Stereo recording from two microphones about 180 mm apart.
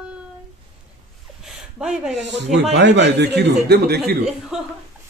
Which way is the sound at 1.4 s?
Centre (ahead or behind).